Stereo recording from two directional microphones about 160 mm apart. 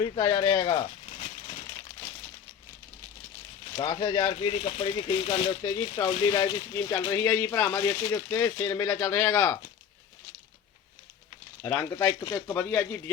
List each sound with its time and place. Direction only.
0.0 s speech: 25° left (ahead or behind)
0.8 s rattle: 40° left (ahead or behind)
3.8 s speech: 30° left (ahead or behind)
4.4 s speech: 35° left (ahead or behind); by 9.6 s 20° left (ahead or behind)
11.6 s speech: 15° left (ahead or behind)